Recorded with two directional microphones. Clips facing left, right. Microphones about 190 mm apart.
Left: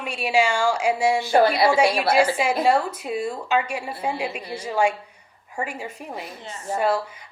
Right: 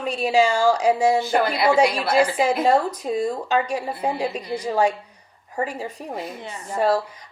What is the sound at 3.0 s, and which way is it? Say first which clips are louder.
A woman's voice: right 3 dB; 40° right (ahead or behind).